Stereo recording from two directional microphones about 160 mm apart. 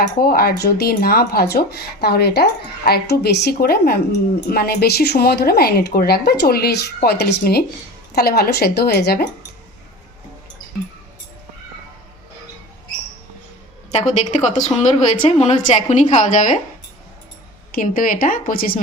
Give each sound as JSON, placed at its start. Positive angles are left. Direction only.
{"t": 0.2, "sound": "speech", "side_deg": 70}
{"t": 14.3, "sound": "a woman's voice", "side_deg": 45}
{"t": 17.7, "sound": "speech", "side_deg": 60}